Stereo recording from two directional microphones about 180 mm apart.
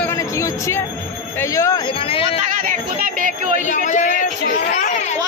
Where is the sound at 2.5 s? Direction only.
50° right (ahead or behind).